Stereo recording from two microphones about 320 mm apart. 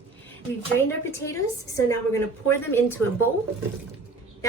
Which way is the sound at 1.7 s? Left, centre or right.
Centre.